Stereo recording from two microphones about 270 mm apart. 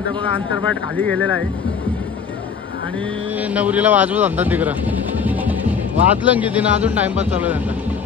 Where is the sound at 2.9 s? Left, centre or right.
Centre.